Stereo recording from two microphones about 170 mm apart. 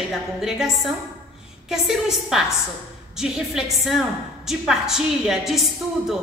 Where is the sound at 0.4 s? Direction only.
Centre (ahead or behind).